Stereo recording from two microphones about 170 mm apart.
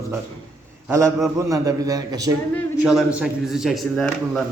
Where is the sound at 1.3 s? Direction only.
20° right (ahead or behind).